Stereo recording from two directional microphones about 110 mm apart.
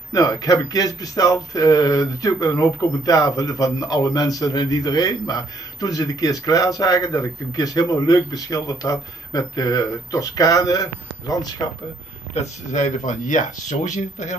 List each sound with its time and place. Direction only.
0.1 s speech: 35° left (ahead or behind)
12.4 s speech: 90° left